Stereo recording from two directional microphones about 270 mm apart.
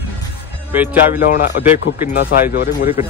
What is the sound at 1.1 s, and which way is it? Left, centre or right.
Speech, left.